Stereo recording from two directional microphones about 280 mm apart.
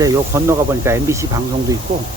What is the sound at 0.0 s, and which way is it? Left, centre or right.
Speech, centre.